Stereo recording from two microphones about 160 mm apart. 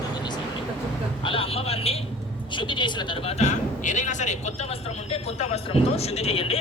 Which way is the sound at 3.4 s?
50° left (ahead or behind).